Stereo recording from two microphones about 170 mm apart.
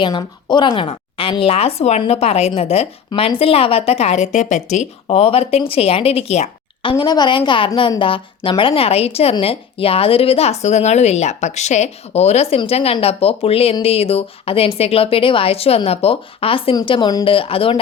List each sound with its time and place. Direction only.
0.0 s speech: 25° left (ahead or behind)
7.0 s a woman's voice: 25° left (ahead or behind)